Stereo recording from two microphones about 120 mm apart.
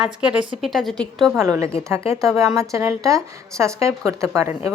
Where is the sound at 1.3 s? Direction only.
25° right (ahead or behind).